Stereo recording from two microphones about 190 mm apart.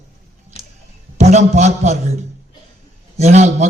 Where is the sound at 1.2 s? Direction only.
35° right (ahead or behind).